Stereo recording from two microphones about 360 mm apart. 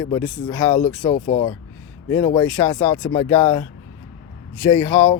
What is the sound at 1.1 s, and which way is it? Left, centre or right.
Speech, left.